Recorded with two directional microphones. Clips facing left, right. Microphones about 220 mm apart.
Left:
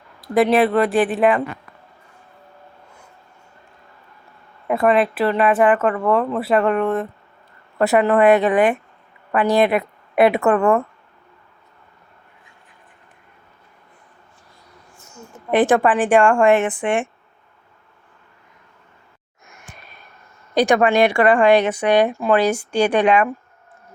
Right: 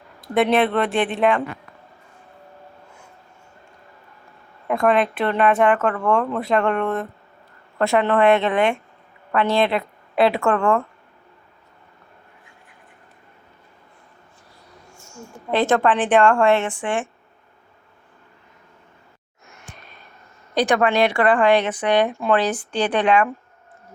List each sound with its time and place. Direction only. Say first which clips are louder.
0.5 s speech: left 3 dB; centre (ahead or behind)
4.7 s speech: left 2 dB; 5° left (ahead or behind)
9.6 s a woman's voice: left 3 dB; 15° left (ahead or behind)
15.0 s a sound: even; 20° left (ahead or behind)
15.9 s speech: left 1 dB; 10° left (ahead or behind)
20.6 s speech: left 3 dB; 15° left (ahead or behind)